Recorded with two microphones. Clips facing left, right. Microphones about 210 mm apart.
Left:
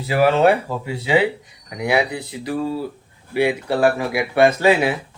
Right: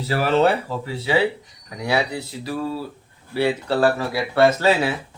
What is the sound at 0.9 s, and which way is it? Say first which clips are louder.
Speech: left 2 dB; 15° left (ahead or behind).